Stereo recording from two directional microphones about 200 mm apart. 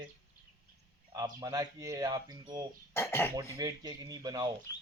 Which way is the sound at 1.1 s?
15° right (ahead or behind).